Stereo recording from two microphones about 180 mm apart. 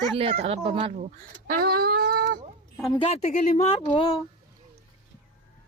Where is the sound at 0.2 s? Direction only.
30° right (ahead or behind).